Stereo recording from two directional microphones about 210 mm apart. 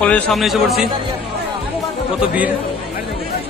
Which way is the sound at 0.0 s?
5° left (ahead or behind).